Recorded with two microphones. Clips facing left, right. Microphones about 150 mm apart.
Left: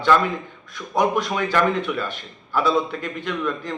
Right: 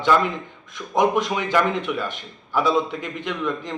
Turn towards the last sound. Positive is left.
turn(degrees=-20)  # may be behind; listen again after turning